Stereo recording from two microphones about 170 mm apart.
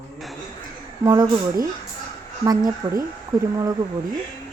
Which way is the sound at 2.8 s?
25° right (ahead or behind).